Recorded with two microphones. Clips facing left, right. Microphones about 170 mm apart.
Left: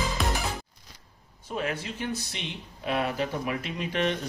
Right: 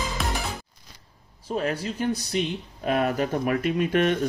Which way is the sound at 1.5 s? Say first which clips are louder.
Right 5 dB; 40° right (ahead or behind).